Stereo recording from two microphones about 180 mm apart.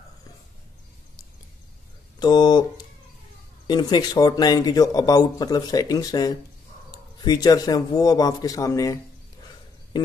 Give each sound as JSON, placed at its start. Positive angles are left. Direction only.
{"t": 2.1, "sound": "speech", "side_deg": 25}
{"t": 3.6, "sound": "speech", "side_deg": 25}